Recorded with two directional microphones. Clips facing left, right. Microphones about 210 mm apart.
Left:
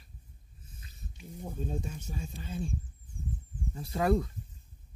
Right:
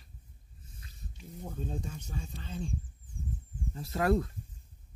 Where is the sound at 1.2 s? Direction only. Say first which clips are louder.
Left 2 dB; 10° left (ahead or behind).